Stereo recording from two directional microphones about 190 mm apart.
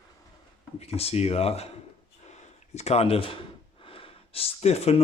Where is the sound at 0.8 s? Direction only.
30° left (ahead or behind).